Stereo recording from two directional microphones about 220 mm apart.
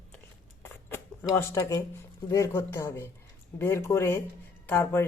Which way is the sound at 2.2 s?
15° left (ahead or behind).